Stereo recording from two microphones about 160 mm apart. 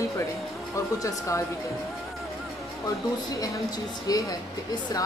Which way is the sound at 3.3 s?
25° left (ahead or behind).